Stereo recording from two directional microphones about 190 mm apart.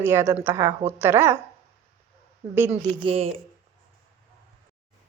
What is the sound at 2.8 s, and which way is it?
Speech, 30° right (ahead or behind).